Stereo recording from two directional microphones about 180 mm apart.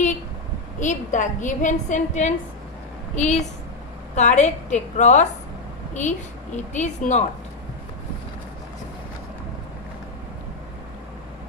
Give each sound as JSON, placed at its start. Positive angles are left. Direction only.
{"t": 0.7, "sound": "a woman's voice", "side_deg": 45}